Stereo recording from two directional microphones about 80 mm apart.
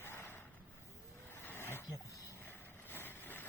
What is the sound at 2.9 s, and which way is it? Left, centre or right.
Vehicle, left.